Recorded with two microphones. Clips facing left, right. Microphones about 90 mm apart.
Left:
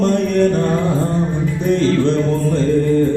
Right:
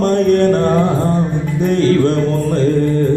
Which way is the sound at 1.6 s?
55° right (ahead or behind).